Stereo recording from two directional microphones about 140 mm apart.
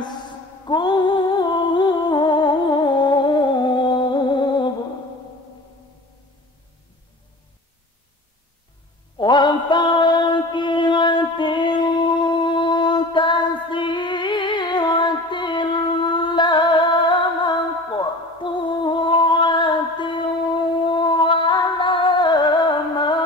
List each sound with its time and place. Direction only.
0.7 s music: 30° left (ahead or behind)
9.2 s music: 35° left (ahead or behind)